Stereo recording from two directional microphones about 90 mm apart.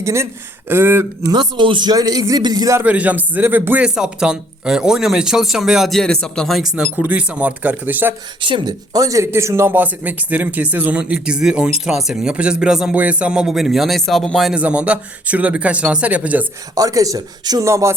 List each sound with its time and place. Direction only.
0.0 s speech: 30° right (ahead or behind)
1.3 s a man's voice: 60° right (ahead or behind)
2.8 s speech: 15° right (ahead or behind)
3.8 s speech: 10° right (ahead or behind)
6.6 s speech: 5° right (ahead or behind)
6.9 s speech: 15° right (ahead or behind)
8.4 s speech: 65° right (ahead or behind)
8.9 s speech: 40° right (ahead or behind); by 14.5 s 5° left (ahead or behind)
14.5 s speech: 15° right (ahead or behind)
16.7 s speech: 40° right (ahead or behind)
17.7 s speech: 35° right (ahead or behind)